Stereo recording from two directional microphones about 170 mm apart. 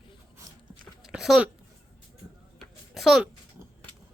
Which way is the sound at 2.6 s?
Centre (ahead or behind).